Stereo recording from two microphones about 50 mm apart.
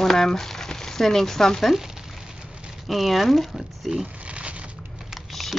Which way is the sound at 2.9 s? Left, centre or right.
Centre.